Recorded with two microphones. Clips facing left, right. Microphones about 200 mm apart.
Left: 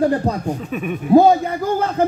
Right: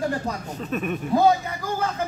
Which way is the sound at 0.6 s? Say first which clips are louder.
Left 2 dB; 10° left (ahead or behind).